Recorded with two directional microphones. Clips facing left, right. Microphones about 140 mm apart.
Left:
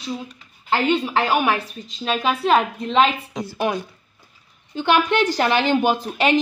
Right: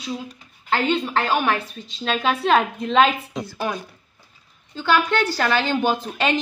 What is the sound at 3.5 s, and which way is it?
A woman's voice, 20° left (ahead or behind).